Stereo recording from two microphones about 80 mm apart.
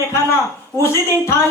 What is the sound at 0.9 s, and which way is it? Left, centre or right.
Speech, left.